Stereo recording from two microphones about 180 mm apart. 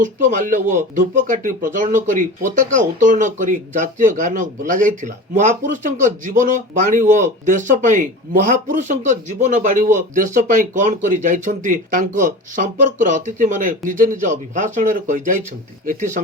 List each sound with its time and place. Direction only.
0.0 s speech: 45° right (ahead or behind)